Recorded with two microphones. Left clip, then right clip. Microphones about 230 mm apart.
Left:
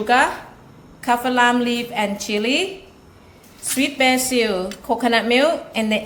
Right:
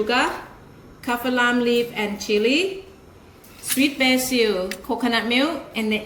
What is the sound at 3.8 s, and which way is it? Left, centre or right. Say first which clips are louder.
A woman's voice: left 2 dB; left.